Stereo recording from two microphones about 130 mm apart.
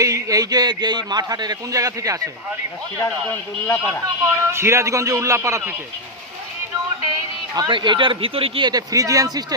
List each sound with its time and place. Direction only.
0.0 s speech: 25° right (ahead or behind)
3.7 s speech: 15° left (ahead or behind)
4.0 s speech: 20° right (ahead or behind)
7.1 s speech: 30° right (ahead or behind)